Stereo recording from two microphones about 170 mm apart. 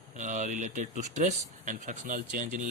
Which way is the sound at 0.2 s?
45° right (ahead or behind).